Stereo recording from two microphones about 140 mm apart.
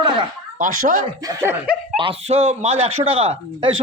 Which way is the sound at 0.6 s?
65° right (ahead or behind).